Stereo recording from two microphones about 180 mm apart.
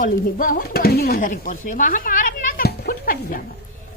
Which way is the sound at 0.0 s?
50° left (ahead or behind).